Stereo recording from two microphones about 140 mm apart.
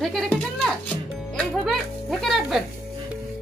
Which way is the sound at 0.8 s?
10° left (ahead or behind).